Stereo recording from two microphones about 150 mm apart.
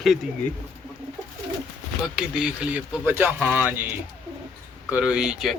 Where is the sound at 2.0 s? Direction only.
5° right (ahead or behind).